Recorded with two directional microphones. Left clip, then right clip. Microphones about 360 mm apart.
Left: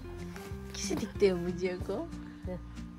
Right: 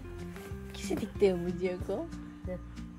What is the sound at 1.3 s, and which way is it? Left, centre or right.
Speech, centre.